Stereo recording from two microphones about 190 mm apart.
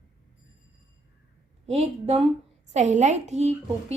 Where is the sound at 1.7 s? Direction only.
35° right (ahead or behind).